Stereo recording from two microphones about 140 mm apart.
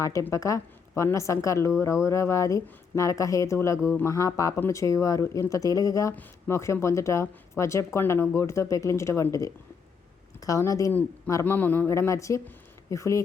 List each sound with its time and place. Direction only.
0.0 s speech: 25° left (ahead or behind)